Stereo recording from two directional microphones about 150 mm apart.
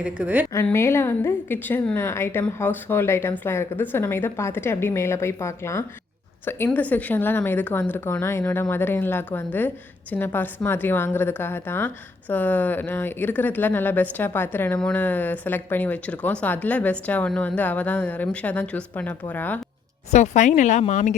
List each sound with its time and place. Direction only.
0.0 s speech: 10° right (ahead or behind)
0.5 s a woman's voice: 15° left (ahead or behind)
20.1 s speech: 50° left (ahead or behind)